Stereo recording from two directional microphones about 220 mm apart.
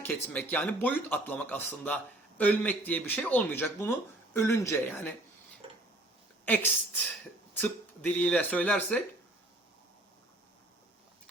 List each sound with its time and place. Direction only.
0.0 s speech: 5° left (ahead or behind)
5.6 s a sound: 25° right (ahead or behind)
6.4 s a woman's voice: 10° left (ahead or behind)